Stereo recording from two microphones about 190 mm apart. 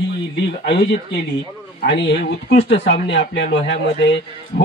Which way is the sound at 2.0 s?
65° left (ahead or behind).